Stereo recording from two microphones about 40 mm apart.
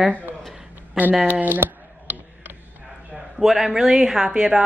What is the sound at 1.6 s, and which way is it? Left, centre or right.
Speech, right.